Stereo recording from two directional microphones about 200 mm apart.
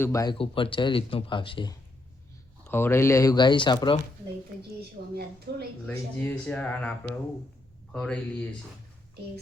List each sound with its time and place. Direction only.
0.0 s speech: 15° left (ahead or behind)
0.3 s speech: 25° left (ahead or behind)
2.6 s speech: 10° left (ahead or behind)
5.0 s a woman's voice: 50° right (ahead or behind)
5.9 s speech: 10° left (ahead or behind)